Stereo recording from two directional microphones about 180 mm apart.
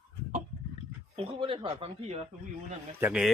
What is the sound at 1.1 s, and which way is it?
Speech, 30° right (ahead or behind).